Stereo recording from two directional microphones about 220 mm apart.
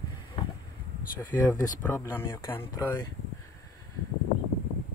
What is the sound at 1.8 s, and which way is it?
A man's voice, 15° left (ahead or behind).